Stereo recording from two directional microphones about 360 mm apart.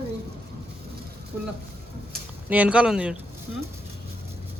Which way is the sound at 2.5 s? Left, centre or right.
Centre.